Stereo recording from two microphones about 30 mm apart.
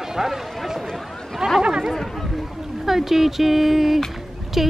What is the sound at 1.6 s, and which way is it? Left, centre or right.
Chatter, right.